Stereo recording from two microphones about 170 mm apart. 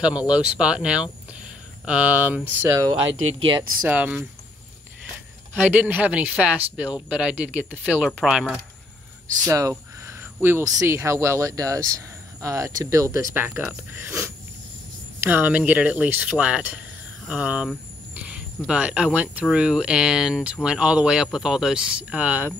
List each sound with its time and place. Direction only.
0.0 s speech: 5° right (ahead or behind)
2.8 s speech: 25° right (ahead or behind)
3.8 s speech: 5° right (ahead or behind)
5.7 s speech: 10° right (ahead or behind)
9.5 s speech: 20° right (ahead or behind)